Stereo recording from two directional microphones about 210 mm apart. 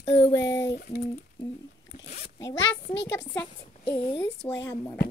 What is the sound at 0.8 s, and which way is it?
Speech, 40° left (ahead or behind).